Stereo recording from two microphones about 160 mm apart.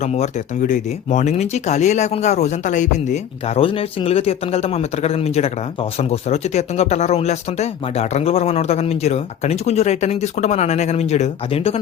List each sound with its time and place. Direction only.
0.0 s speech: 45° left (ahead or behind)